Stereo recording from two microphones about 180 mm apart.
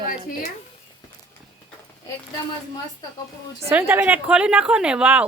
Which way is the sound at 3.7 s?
10° right (ahead or behind).